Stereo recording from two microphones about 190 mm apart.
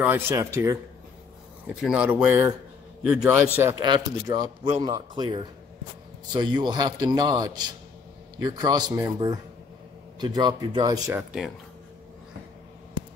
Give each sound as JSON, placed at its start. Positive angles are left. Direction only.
{"t": 0.0, "sound": "a man's voice", "side_deg": -10}
{"t": 1.8, "sound": "a man's voice", "side_deg": -5}
{"t": 3.8, "sound": "a man's voice", "side_deg": -20}
{"t": 11.1, "sound": "speech", "side_deg": 0}